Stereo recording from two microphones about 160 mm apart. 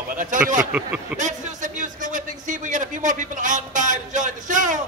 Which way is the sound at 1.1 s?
50° right (ahead or behind).